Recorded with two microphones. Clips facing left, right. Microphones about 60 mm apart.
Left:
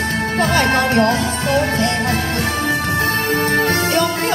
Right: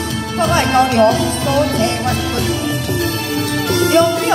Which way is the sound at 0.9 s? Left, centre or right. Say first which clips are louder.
Right 3 dB; left.